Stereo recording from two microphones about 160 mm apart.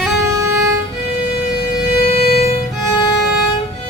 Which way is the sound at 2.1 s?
40° left (ahead or behind).